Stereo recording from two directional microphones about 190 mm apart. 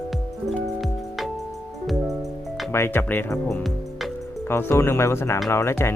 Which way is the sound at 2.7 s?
10° left (ahead or behind).